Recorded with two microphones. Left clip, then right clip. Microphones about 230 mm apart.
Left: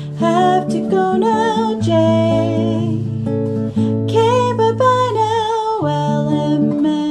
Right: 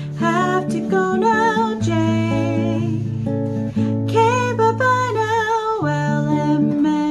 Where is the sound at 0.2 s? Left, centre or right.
Centre.